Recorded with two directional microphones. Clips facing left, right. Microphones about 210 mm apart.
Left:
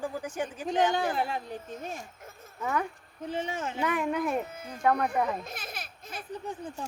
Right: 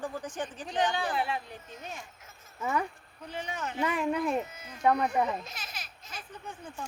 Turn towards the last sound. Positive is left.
turn(degrees=55)  # may be behind; listen again after turning